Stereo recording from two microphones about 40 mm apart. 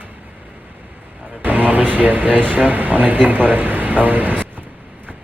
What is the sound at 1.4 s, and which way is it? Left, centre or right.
A man's voice, right.